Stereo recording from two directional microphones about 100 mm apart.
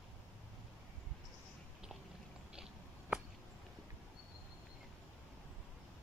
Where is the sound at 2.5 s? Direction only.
10° right (ahead or behind).